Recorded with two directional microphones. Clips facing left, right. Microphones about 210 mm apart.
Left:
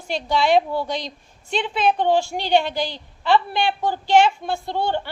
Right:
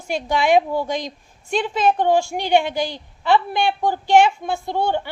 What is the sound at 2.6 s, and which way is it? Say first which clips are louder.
Speech: right 2 dB; 50° right (ahead or behind).